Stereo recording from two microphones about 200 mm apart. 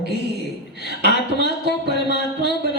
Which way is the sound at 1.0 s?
55° right (ahead or behind).